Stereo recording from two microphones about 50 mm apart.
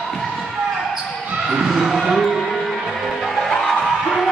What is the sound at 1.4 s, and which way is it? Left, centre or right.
Basketball bounce, centre.